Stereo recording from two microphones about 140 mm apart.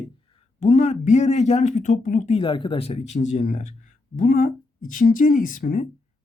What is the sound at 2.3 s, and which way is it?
Speech, 35° left (ahead or behind).